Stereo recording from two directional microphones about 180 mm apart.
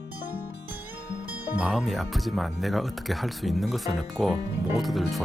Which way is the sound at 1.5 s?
Centre (ahead or behind).